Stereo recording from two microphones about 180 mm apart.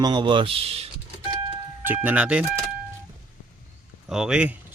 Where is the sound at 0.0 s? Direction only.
25° right (ahead or behind).